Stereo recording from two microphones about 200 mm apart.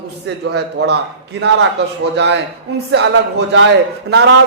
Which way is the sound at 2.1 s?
60° right (ahead or behind).